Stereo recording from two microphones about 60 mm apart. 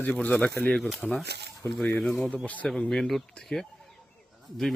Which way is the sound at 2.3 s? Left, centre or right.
Left.